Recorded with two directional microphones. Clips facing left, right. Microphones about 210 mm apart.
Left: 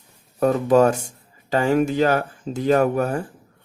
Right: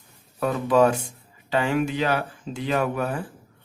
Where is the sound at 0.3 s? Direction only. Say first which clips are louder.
Left 4 dB; 45° left (ahead or behind).